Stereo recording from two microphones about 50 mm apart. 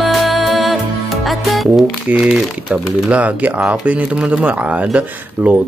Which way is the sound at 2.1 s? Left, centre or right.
Right.